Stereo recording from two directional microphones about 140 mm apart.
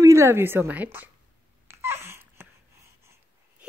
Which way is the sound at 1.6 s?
20° right (ahead or behind).